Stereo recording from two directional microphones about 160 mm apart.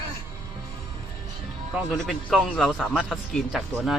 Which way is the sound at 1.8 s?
Centre (ahead or behind).